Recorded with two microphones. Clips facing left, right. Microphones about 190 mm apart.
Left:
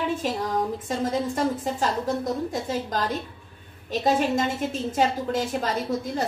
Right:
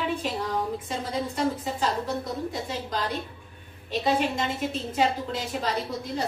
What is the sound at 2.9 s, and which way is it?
A woman's voice, 45° left (ahead or behind).